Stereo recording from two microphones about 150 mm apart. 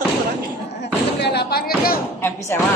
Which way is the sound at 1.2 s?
90° left.